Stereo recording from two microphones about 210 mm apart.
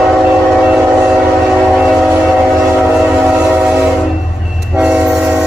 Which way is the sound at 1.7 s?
Centre (ahead or behind).